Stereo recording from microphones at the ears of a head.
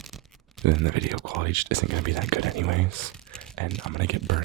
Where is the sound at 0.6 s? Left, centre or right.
Right.